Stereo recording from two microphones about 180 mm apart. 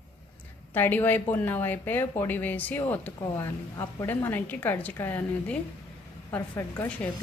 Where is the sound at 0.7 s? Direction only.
10° left (ahead or behind).